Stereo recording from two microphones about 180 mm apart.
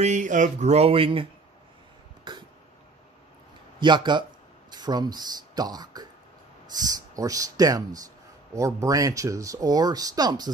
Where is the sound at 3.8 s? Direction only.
25° right (ahead or behind).